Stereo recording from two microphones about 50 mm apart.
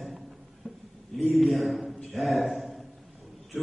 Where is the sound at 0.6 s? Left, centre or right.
Right.